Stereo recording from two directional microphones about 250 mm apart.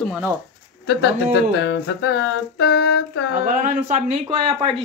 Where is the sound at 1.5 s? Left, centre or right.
Left.